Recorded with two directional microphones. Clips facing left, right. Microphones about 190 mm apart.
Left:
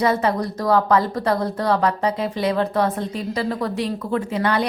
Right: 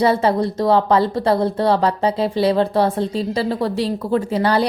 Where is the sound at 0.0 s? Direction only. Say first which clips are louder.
Right 3 dB; 30° right (ahead or behind).